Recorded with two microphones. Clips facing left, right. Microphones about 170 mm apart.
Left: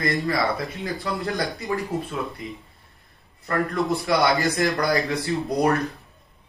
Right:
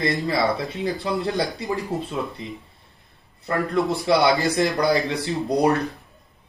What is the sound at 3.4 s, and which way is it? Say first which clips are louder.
Speech: right 1 dB; 20° right (ahead or behind).